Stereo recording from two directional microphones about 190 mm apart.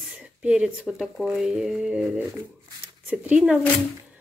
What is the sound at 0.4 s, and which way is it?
Speech, 5° right (ahead or behind).